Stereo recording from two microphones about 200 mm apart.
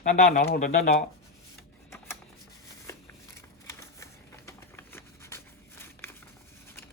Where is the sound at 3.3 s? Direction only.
15° left (ahead or behind).